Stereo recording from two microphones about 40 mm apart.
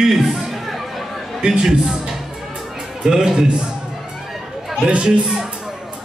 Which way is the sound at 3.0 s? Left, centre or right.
Centre.